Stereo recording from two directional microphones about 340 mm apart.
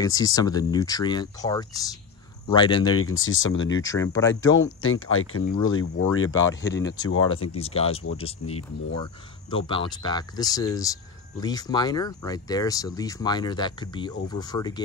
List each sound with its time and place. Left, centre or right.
0.0 s speech: centre
2.9 s speech: left
3.8 s speech: centre
4.4 s speech: left
6.4 s speech: centre